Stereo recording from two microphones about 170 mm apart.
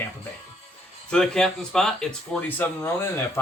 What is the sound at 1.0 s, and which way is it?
Speech, 5° left (ahead or behind).